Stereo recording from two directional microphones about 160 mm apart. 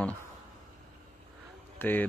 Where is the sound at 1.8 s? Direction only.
10° left (ahead or behind).